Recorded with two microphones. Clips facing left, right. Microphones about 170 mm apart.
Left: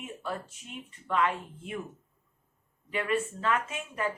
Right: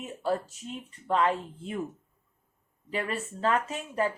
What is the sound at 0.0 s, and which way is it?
Speech, 40° right (ahead or behind).